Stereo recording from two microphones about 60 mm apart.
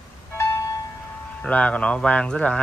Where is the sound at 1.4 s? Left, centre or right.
Centre.